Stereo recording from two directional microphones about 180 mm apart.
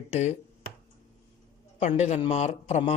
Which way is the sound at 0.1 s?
40° left (ahead or behind).